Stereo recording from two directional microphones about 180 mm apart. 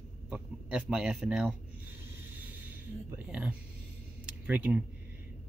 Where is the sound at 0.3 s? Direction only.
5° right (ahead or behind).